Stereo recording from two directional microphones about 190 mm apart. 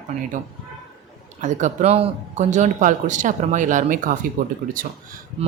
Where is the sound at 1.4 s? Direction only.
40° right (ahead or behind).